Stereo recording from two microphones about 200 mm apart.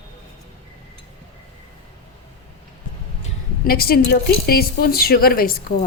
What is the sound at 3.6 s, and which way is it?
A woman's voice, 50° left (ahead or behind).